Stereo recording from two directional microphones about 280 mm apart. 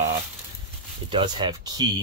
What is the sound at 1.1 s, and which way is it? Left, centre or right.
Speech, centre.